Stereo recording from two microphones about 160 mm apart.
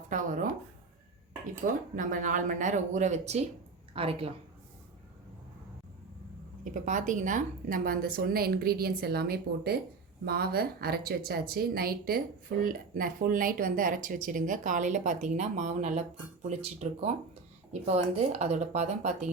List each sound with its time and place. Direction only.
0.1 s a woman's voice: 55° right (ahead or behind)
1.6 s a woman's voice: 55° right (ahead or behind); by 4.3 s 35° right (ahead or behind)
6.7 s a woman's voice: 50° right (ahead or behind)